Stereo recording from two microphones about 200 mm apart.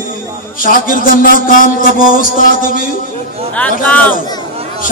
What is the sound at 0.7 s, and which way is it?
Music, 45° left (ahead or behind).